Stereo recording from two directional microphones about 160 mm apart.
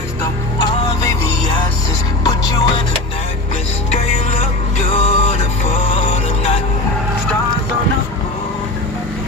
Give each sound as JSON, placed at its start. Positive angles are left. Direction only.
{"t": 2.2, "sound": "music", "side_deg": 25}
{"t": 4.9, "sound": "music", "side_deg": 40}